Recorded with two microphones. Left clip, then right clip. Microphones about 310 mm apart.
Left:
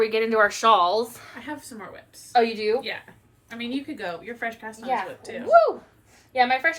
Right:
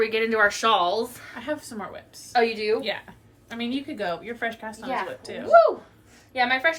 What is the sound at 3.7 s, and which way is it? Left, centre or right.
Speech, centre.